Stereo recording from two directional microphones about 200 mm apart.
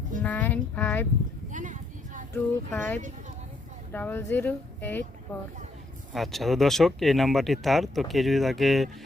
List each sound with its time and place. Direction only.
0.2 s speech: 10° left (ahead or behind)
1.5 s a sound: 40° right (ahead or behind)
2.3 s speech: 10° left (ahead or behind)
6.1 s speech: centre (ahead or behind)